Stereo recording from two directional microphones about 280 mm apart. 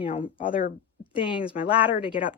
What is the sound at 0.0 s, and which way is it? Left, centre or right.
Speech, centre.